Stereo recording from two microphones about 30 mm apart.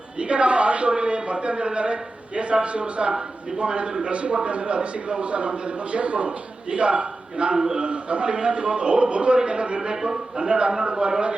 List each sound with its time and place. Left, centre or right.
0.2 s a man's voice: right
7.5 s a man's voice: right
7.8 s speech: right